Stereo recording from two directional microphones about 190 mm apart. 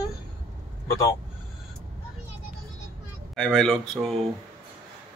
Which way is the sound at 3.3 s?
5° left (ahead or behind).